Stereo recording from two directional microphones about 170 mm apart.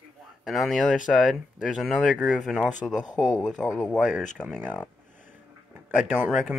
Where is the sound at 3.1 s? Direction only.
20° left (ahead or behind).